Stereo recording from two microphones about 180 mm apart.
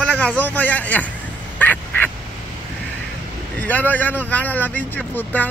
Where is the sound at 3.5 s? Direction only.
10° left (ahead or behind).